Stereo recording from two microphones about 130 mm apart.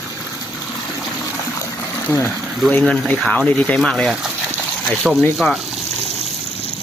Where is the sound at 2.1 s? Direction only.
15° left (ahead or behind); by 4.3 s centre (ahead or behind).